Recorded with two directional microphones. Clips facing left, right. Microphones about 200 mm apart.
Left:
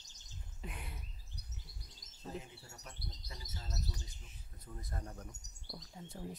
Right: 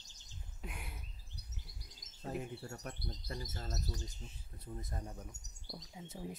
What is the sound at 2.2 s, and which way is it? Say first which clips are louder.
Speech: right 5 dB; 60° right (ahead or behind).